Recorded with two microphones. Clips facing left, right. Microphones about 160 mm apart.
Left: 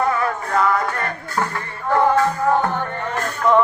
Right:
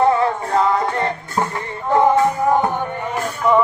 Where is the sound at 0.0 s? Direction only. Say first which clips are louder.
Right 5 dB; 25° right (ahead or behind).